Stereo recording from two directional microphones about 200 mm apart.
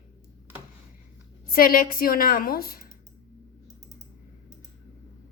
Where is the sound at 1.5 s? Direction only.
45° left (ahead or behind).